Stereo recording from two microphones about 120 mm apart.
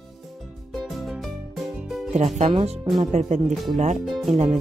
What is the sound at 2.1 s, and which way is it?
Speech, 75° right (ahead or behind).